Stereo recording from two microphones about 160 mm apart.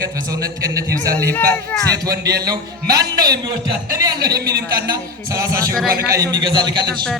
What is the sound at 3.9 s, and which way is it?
Speech, 20° right (ahead or behind).